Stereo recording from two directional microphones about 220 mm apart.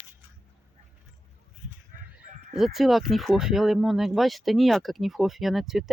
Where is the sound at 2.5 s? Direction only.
Centre (ahead or behind).